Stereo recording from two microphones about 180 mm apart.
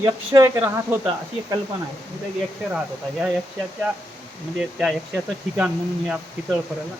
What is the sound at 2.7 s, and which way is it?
Speech, 5° right (ahead or behind).